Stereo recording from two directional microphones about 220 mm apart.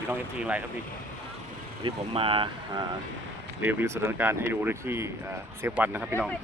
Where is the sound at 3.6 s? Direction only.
10° right (ahead or behind).